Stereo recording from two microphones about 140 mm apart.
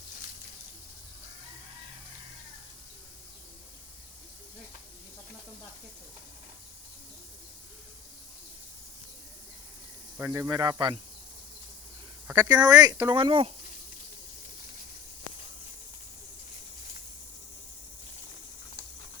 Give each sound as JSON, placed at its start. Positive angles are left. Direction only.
{"t": 10.2, "sound": "speech", "side_deg": -20}
{"t": 12.3, "sound": "speech", "side_deg": -30}